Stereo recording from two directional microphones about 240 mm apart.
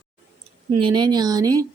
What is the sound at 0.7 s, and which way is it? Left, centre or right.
Speech, centre.